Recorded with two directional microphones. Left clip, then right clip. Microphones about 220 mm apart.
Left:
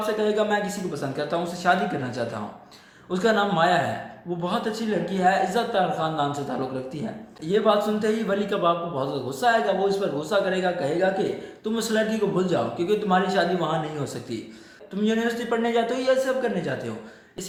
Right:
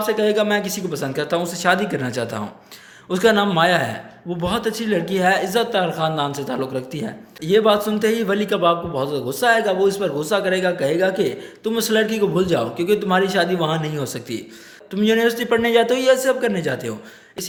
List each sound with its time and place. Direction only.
0.0 s speech: 50° right (ahead or behind)